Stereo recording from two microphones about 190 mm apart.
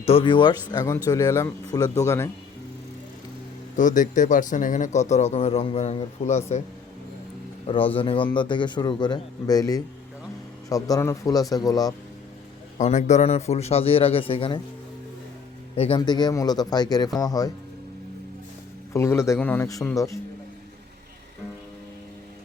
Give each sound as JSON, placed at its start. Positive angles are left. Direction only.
{"t": 0.0, "sound": "a man's voice", "side_deg": 30}
{"t": 3.8, "sound": "speech", "side_deg": 40}
{"t": 7.9, "sound": "a man's voice", "side_deg": 30}
{"t": 12.8, "sound": "speech", "side_deg": 40}
{"t": 15.7, "sound": "a man's voice", "side_deg": 30}
{"t": 18.9, "sound": "speech", "side_deg": 15}